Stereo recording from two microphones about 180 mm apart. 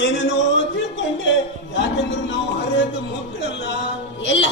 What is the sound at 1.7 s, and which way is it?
Music, 75° left (ahead or behind).